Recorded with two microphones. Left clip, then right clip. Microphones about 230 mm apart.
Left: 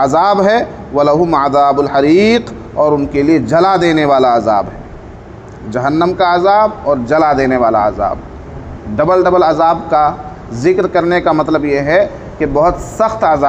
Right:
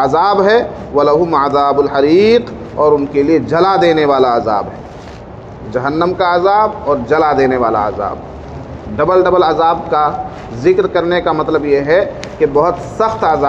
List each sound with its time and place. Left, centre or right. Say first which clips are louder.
0.0 s a man's voice: left 1 dB; left
5.7 s a man's voice: left 1 dB; left